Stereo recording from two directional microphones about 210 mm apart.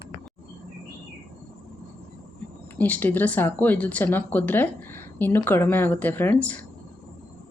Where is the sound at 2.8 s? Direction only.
10° left (ahead or behind).